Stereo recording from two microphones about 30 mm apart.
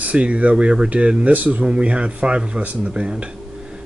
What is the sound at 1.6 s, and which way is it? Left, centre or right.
Speech, right.